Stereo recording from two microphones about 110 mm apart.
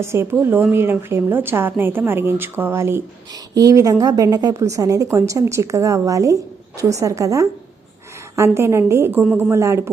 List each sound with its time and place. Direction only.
0.0 s a woman's voice: 25° right (ahead or behind)
8.5 s a woman's voice: 25° right (ahead or behind)